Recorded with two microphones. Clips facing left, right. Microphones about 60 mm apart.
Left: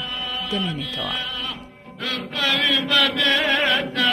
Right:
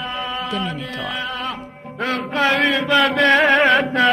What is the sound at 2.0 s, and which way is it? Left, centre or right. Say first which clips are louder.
Music: right 7 dB; right.